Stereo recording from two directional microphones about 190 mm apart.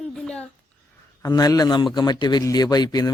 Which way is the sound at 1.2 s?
20° left (ahead or behind).